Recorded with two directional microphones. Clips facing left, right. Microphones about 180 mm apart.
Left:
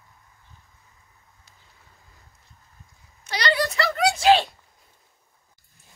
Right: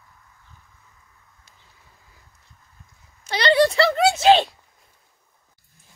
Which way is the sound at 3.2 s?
25° right (ahead or behind).